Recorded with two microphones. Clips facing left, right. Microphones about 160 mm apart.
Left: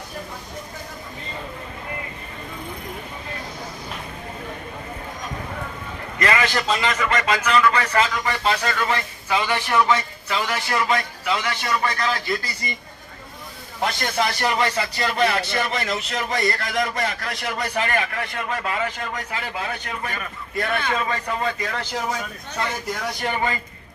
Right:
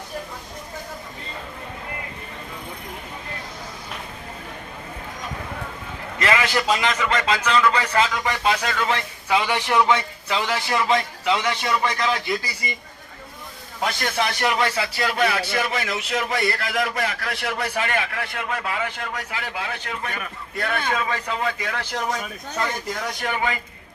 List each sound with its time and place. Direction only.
6.2 s a man's voice: 10° right (ahead or behind)
13.8 s speech: centre (ahead or behind)
23.2 s a man's voice: 5° right (ahead or behind)